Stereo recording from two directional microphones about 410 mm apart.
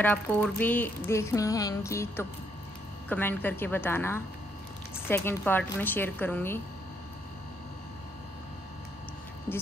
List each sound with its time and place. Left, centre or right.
0.0 s a sound: centre
3.1 s a woman's voice: centre
9.5 s a woman's voice: centre